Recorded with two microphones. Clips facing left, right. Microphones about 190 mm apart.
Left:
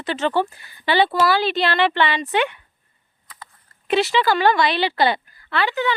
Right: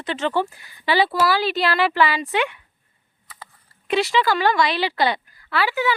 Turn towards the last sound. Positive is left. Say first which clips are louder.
# even
turn(degrees=-10)  # may be behind; listen again after turning